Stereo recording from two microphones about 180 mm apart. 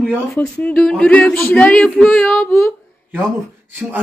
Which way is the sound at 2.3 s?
Centre (ahead or behind).